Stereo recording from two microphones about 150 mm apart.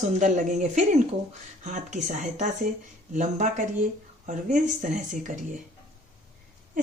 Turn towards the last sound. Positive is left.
turn(degrees=-55)  # may be behind; listen again after turning